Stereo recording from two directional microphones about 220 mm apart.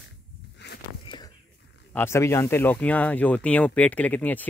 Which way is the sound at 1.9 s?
10° left (ahead or behind).